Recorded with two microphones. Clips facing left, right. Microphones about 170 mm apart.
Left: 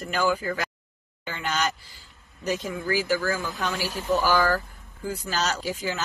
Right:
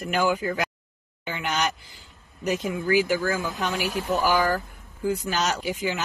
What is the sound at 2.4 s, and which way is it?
Speech, 20° right (ahead or behind).